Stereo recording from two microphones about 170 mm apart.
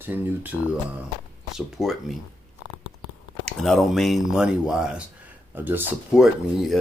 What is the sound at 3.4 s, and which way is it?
Speech, centre (ahead or behind).